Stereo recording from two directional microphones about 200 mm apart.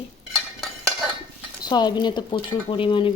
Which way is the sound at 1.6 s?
20° left (ahead or behind).